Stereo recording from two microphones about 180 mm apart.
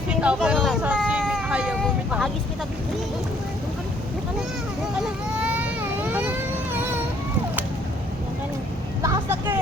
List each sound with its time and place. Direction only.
0.1 s speech: 5° right (ahead or behind)
0.9 s vehicle: centre (ahead or behind)
4.9 s vehicle: 5° right (ahead or behind)
9.0 s vehicle: 15° right (ahead or behind)